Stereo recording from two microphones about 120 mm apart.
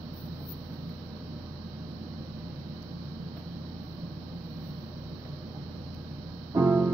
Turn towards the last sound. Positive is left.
turn(degrees=-20)  # may be behind; listen again after turning